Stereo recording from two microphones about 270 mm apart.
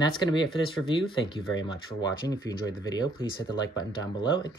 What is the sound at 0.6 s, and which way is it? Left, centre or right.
Speech, centre.